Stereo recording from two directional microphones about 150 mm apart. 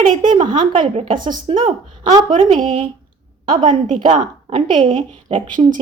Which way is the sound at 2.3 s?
60° right (ahead or behind).